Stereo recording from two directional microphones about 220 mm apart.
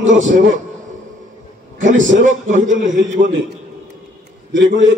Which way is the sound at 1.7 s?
35° right (ahead or behind).